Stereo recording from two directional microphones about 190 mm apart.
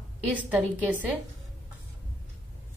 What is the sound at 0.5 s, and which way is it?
Speech, 10° right (ahead or behind).